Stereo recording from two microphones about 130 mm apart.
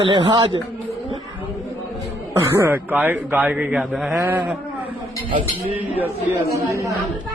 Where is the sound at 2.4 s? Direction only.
15° right (ahead or behind).